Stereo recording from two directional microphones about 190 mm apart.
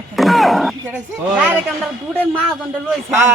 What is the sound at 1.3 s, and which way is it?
A man's voice, 5° right (ahead or behind).